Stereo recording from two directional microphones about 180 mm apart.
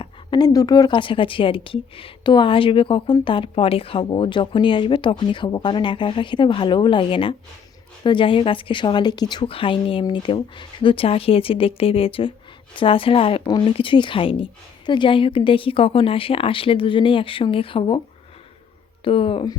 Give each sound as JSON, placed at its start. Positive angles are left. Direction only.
{"t": 0.0, "sound": "a woman's voice", "side_deg": 25}
{"t": 19.0, "sound": "a woman's voice", "side_deg": 30}